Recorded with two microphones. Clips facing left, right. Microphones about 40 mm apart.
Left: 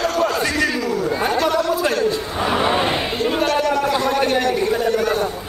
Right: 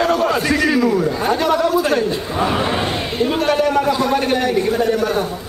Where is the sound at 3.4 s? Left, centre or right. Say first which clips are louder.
Right 4 dB; centre.